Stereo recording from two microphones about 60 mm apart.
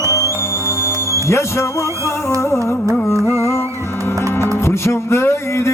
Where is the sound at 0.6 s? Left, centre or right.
Left.